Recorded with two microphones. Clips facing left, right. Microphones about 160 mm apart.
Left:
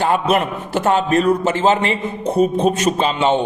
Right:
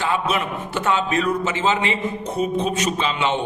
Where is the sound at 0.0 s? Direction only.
50° left (ahead or behind).